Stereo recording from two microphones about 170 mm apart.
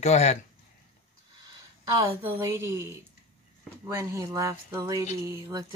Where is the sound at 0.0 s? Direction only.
40° left (ahead or behind).